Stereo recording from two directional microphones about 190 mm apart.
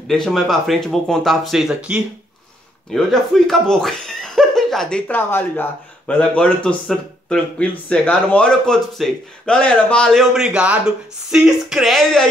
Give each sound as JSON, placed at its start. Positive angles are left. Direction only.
{"t": 0.1, "sound": "speech", "side_deg": 0}